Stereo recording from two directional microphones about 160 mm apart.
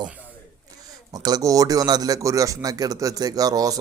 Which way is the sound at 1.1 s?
25° right (ahead or behind).